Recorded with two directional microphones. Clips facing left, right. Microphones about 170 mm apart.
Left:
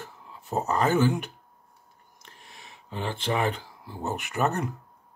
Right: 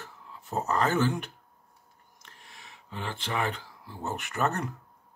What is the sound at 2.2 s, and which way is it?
Speech, 20° left (ahead or behind).